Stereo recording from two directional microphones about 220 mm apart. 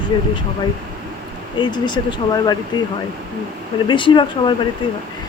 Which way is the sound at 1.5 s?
20° left (ahead or behind).